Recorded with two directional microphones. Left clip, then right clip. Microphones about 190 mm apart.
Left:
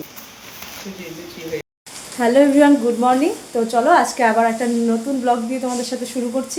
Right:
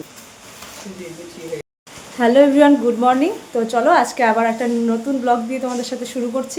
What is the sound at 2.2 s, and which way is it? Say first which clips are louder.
A woman's voice: right 1 dB; 5° right (ahead or behind).